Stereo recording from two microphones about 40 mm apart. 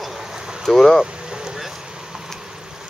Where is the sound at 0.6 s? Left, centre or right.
Centre.